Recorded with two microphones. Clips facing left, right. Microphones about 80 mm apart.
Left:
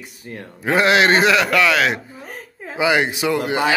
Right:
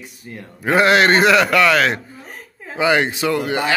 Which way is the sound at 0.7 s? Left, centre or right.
Centre.